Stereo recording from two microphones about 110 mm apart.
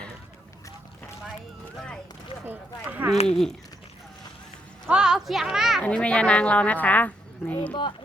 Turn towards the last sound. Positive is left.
turn(degrees=15)  # may be behind; listen again after turning